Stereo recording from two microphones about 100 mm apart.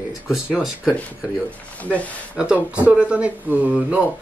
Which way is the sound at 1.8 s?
15° left (ahead or behind).